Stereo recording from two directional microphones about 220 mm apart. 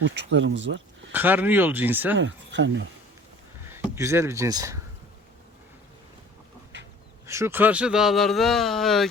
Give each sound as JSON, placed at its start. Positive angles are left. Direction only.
{"t": 0.0, "sound": "speech", "side_deg": -55}
{"t": 1.1, "sound": "speech", "side_deg": -10}
{"t": 2.1, "sound": "speech", "side_deg": -55}
{"t": 3.7, "sound": "speech", "side_deg": -15}
{"t": 7.3, "sound": "speech", "side_deg": -10}